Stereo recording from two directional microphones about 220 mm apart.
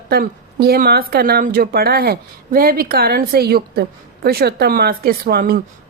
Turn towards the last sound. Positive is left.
turn(degrees=-40)  # may be behind; listen again after turning